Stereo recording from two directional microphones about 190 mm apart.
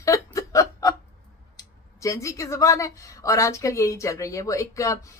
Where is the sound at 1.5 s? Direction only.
15° left (ahead or behind).